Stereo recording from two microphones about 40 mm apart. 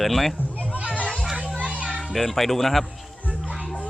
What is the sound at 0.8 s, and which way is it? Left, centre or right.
Children playing, right.